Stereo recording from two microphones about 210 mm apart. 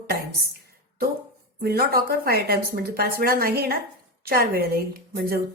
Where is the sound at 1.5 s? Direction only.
45° right (ahead or behind).